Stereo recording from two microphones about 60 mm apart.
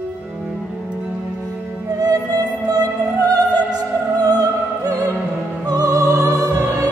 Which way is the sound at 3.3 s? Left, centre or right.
Right.